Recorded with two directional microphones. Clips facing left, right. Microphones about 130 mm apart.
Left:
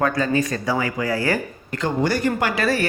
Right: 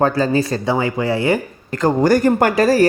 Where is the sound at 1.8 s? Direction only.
45° right (ahead or behind).